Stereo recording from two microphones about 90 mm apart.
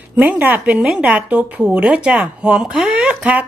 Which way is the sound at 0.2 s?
20° right (ahead or behind).